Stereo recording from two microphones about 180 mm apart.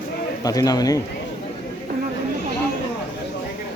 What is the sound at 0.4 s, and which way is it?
Speech, 20° left (ahead or behind).